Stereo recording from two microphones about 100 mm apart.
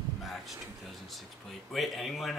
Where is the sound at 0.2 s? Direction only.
Centre (ahead or behind).